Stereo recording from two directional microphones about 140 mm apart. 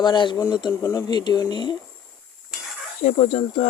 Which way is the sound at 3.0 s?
50° left (ahead or behind).